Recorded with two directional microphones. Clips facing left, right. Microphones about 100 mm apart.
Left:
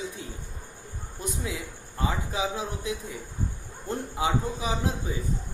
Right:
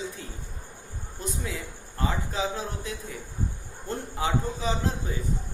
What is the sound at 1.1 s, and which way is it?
A man's voice, 15° left (ahead or behind).